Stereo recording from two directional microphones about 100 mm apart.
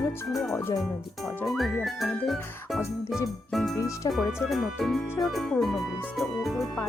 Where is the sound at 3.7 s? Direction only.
30° left (ahead or behind).